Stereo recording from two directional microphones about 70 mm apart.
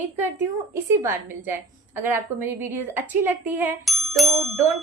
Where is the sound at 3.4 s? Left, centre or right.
Right.